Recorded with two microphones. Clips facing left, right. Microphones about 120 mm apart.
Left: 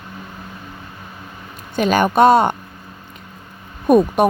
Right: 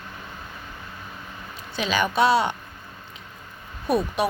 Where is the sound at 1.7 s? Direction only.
50° left (ahead or behind).